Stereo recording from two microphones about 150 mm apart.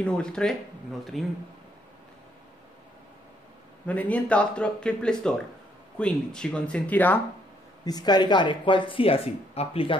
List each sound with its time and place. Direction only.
0.0 s speech: 5° left (ahead or behind)
3.8 s speech: 10° left (ahead or behind)
7.8 s speech: 25° left (ahead or behind)